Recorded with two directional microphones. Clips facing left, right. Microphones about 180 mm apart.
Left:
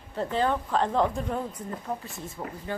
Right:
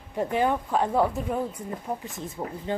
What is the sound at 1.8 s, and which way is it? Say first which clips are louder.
Speech: right 2 dB; 20° right (ahead or behind).